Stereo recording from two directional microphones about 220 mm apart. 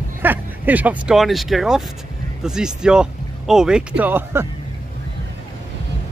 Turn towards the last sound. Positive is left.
turn(degrees=-10)  # may be behind; listen again after turning